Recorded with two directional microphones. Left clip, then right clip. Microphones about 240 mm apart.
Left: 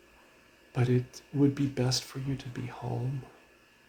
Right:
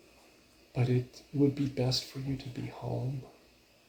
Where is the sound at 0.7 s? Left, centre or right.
Left.